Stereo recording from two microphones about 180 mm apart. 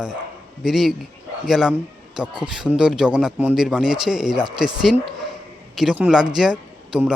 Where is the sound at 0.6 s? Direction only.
Centre (ahead or behind).